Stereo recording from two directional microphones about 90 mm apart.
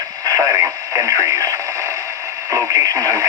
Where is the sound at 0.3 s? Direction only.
35° right (ahead or behind).